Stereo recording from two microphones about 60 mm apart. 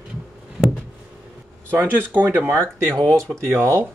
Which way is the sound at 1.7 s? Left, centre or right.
Right.